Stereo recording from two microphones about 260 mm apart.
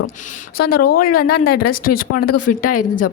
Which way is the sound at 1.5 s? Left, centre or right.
Left.